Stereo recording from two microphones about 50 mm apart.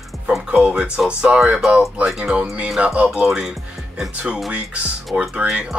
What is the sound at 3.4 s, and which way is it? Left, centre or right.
Music, centre.